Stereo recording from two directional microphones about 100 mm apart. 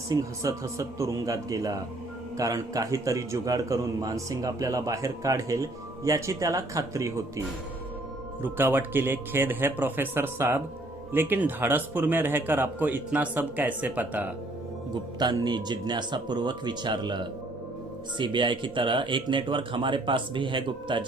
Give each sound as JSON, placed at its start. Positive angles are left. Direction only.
{"t": 0.1, "sound": "a man's voice", "side_deg": -35}
{"t": 8.4, "sound": "speech", "side_deg": -20}
{"t": 15.2, "sound": "speech", "side_deg": -45}